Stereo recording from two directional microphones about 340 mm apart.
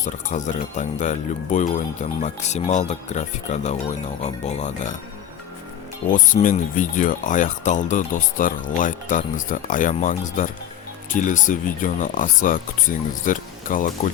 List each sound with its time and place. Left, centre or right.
0.0 s speech: left
6.1 s speech: left